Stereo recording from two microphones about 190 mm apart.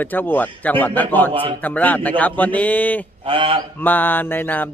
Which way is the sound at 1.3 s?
30° right (ahead or behind).